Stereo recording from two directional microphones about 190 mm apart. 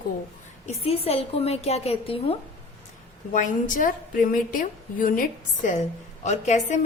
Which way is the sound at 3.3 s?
45° left (ahead or behind).